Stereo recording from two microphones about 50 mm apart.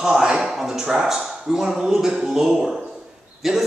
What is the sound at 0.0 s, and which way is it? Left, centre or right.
A man's voice, centre.